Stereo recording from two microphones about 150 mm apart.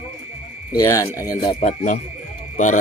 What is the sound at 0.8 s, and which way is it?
Speech, 20° left (ahead or behind).